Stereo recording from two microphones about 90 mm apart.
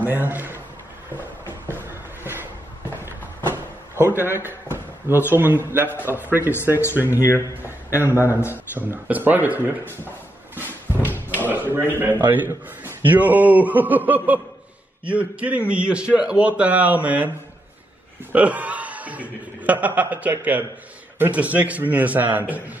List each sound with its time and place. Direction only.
0.0 s a man's voice: 20° right (ahead or behind)
1.1 s a sound: 25° left (ahead or behind)
1.8 s a sound: 25° right (ahead or behind)
3.5 s drawer open or close: 25° right (ahead or behind)
4.5 s a man's voice: 25° right (ahead or behind)
7.2 s speech: 30° left (ahead or behind)
8.0 s a man's voice: 25° right (ahead or behind)
8.3 s speech: 30° left (ahead or behind)
8.7 s a man's voice: 20° right (ahead or behind)
10.5 s a sound: 20° right (ahead or behind)
12.0 s a man's voice: 20° right (ahead or behind)
18.3 s a man's voice: 15° right (ahead or behind)